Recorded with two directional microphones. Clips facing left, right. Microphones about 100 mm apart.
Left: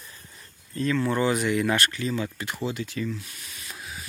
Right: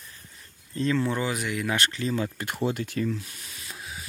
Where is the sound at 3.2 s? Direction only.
30° right (ahead or behind).